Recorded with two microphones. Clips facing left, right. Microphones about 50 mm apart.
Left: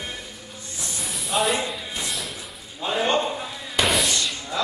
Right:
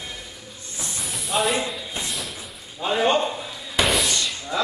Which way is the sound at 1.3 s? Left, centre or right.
Centre.